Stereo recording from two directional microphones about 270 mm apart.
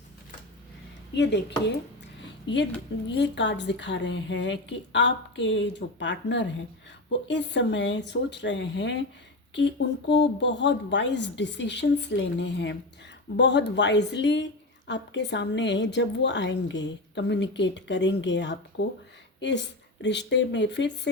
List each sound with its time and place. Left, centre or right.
1.1 s a woman's voice: left
2.5 s a woman's voice: centre
3.2 s a woman's voice: left
10.1 s a woman's voice: left
20.0 s a woman's voice: left